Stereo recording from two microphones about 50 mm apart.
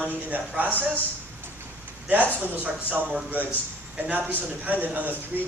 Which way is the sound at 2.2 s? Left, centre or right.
Right.